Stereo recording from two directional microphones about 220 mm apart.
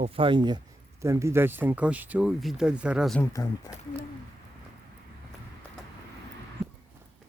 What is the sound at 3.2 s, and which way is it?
Speech, 15° left (ahead or behind).